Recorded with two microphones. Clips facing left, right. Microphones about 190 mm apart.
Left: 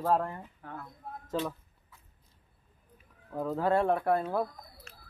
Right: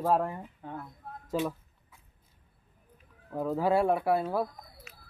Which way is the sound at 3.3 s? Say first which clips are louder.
Right 1 dB; 5° right (ahead or behind).